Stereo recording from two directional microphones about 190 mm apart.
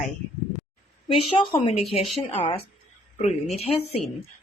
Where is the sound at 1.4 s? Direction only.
30° left (ahead or behind).